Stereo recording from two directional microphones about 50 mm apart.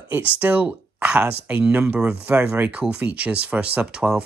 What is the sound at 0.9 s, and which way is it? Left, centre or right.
Speech, right.